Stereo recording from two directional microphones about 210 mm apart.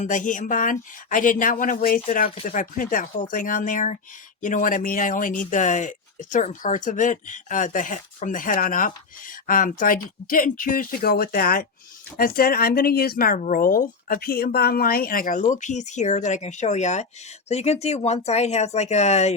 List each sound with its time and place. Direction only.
0.0 s speech: 40° left (ahead or behind)